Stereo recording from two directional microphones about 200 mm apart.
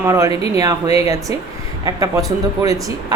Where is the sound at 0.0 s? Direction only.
15° right (ahead or behind).